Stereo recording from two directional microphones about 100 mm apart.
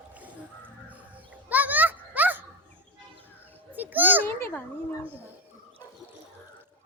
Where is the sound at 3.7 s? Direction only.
20° right (ahead or behind).